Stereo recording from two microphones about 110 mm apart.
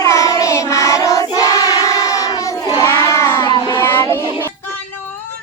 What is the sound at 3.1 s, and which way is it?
Child singing, 25° left (ahead or behind).